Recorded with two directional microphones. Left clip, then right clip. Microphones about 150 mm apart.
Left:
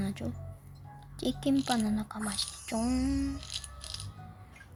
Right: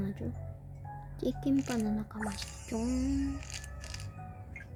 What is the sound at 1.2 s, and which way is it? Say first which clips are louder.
Music: left 1 dB; 20° left (ahead or behind).